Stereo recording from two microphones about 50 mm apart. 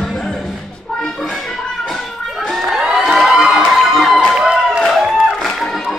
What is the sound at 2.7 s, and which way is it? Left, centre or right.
Crowd, centre.